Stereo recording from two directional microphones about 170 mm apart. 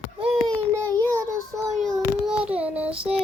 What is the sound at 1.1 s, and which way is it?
Child singing, 20° right (ahead or behind).